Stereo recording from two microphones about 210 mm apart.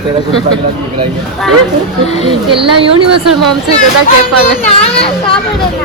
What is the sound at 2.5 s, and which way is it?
Speech, 25° right (ahead or behind).